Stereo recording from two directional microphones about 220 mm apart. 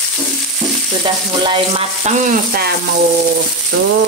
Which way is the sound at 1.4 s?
25° right (ahead or behind).